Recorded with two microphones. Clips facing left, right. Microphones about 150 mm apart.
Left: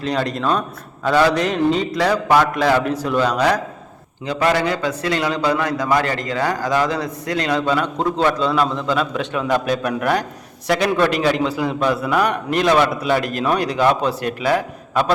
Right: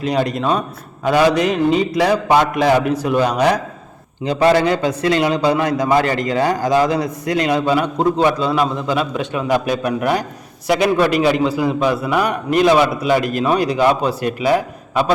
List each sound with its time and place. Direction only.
0.0 s a man's voice: 10° right (ahead or behind)